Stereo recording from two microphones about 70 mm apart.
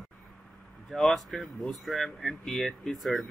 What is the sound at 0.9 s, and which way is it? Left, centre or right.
Speech, centre.